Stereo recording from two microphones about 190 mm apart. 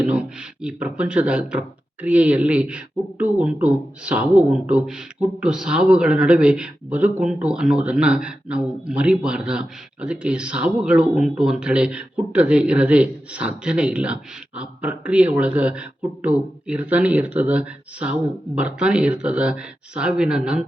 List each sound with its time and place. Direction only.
0.0 s speech: 5° right (ahead or behind)